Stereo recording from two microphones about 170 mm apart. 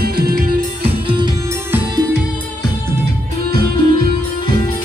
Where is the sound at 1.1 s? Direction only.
25° right (ahead or behind).